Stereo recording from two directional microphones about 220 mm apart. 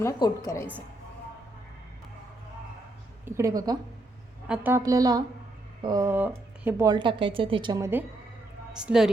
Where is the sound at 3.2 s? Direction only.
15° right (ahead or behind).